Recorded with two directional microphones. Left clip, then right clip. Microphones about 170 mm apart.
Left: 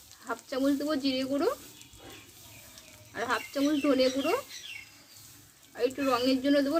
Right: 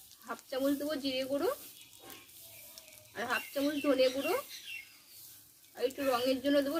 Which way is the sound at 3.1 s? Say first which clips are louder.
Left 4 dB; 25° left (ahead or behind).